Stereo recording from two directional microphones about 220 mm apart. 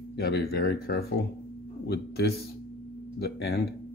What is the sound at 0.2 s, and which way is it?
Speech, 45° left (ahead or behind).